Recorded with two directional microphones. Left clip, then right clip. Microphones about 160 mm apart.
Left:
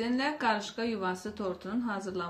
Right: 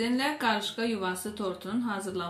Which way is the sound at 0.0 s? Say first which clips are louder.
Right 2 dB; centre (ahead or behind).